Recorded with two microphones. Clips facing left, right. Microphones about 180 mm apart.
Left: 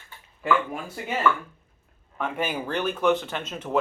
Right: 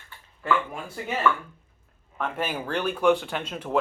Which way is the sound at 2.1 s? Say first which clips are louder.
Left 1 dB; 5° left (ahead or behind).